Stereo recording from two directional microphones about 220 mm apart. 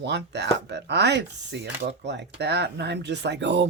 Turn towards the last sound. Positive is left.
turn(degrees=-55)  # may be behind; listen again after turning